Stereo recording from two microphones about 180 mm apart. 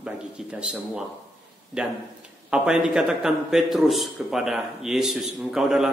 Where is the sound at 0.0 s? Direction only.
5° right (ahead or behind).